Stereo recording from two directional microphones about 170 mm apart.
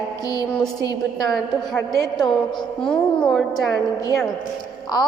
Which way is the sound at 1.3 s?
Centre (ahead or behind).